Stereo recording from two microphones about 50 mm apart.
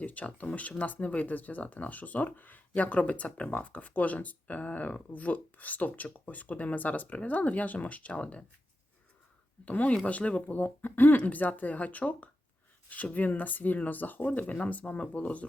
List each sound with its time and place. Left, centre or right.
0.0 s speech: left
9.6 s speech: left